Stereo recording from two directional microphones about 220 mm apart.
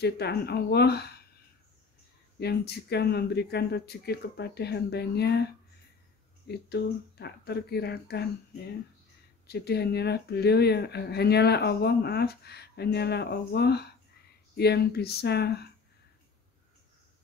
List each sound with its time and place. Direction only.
0.0 s speech: 45° left (ahead or behind)
2.4 s speech: 50° left (ahead or behind)
9.5 s speech: 45° left (ahead or behind)